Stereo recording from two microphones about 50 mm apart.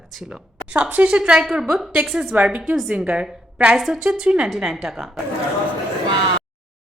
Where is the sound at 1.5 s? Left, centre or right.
Centre; by 3.7 s right.